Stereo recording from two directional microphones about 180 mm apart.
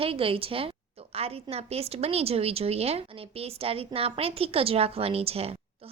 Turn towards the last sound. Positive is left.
turn(degrees=-35)  # may be behind; listen again after turning